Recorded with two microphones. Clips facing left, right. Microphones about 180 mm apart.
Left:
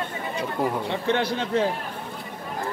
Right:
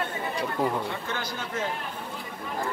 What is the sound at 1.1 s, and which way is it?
Speech, 30° left (ahead or behind).